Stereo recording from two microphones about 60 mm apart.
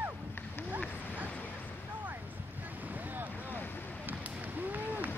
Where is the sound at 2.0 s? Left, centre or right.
Right.